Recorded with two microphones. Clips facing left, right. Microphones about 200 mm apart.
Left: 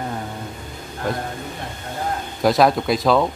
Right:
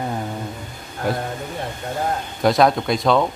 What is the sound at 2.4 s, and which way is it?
Speech, centre (ahead or behind).